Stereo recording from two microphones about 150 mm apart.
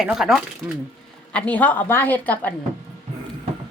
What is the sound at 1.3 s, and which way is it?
A woman's voice, 10° left (ahead or behind).